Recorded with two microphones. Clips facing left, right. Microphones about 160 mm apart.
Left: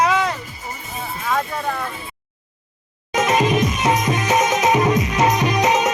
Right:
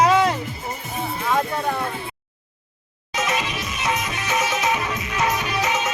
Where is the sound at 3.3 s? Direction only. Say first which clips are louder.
Left 11 dB; 35° left (ahead or behind).